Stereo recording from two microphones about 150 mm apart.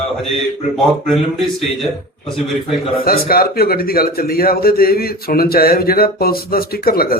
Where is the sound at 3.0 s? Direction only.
85° left.